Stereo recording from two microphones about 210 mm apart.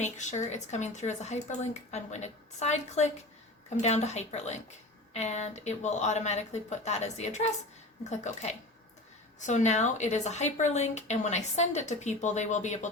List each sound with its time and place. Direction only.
0.0 s a woman's voice: 35° left (ahead or behind)